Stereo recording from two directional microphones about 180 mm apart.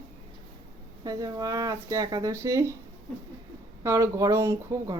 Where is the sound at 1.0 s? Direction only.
20° right (ahead or behind).